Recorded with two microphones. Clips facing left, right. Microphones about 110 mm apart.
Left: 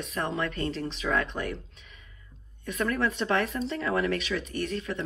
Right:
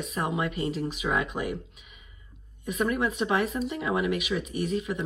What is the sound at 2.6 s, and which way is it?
Speech, 15° right (ahead or behind).